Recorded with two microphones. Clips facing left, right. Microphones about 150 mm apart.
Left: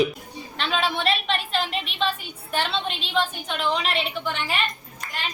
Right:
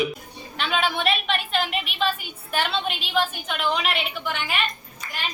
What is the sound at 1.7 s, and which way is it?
A woman's voice, 30° left (ahead or behind).